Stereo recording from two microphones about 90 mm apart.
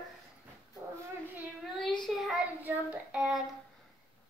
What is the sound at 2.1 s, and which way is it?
Child singing, centre (ahead or behind).